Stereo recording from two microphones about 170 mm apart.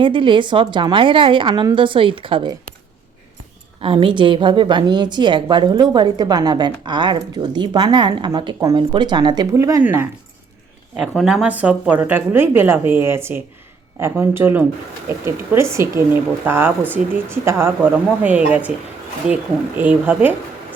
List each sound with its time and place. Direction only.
0.0 s a woman's voice: 30° right (ahead or behind)
3.8 s a woman's voice: 30° right (ahead or behind); by 10.1 s 15° right (ahead or behind)
10.9 s speech: centre (ahead or behind)